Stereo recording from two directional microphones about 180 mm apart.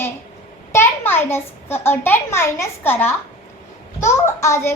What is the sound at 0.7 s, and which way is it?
A child's voice, 15° left (ahead or behind).